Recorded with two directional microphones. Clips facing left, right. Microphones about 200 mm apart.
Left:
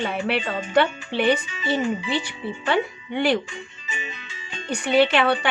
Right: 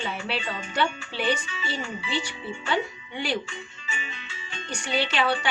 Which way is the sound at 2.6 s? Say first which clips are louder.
Left 5 dB; 60° left (ahead or behind).